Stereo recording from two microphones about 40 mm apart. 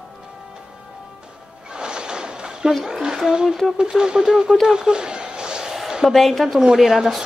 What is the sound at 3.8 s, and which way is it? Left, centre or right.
Speech, centre.